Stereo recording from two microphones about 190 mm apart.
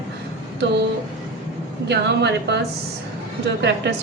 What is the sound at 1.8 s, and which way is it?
Speech, 65° right (ahead or behind).